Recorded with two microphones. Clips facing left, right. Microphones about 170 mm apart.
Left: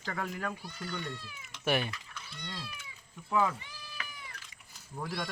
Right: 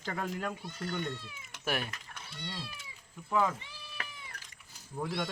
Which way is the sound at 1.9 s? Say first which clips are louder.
Left 1 dB; 50° right (ahead or behind).